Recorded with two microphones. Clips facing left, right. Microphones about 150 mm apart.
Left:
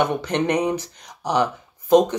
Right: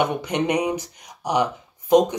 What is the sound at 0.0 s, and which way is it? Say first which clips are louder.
Speech: left 1 dB; 15° right (ahead or behind).